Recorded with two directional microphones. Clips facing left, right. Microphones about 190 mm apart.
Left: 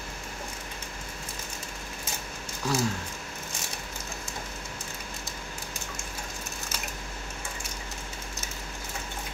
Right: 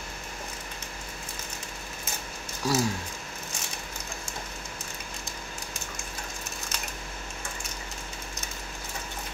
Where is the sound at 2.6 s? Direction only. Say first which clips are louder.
Right 2 dB; 10° right (ahead or behind).